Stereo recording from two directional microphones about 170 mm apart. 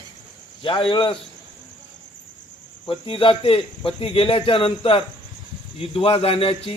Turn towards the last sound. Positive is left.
turn(degrees=35)  # may be behind; listen again after turning